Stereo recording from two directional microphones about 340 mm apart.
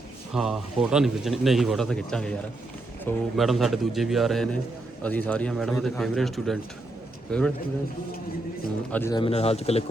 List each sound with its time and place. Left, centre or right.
0.3 s a man's voice: centre
8.9 s speech: centre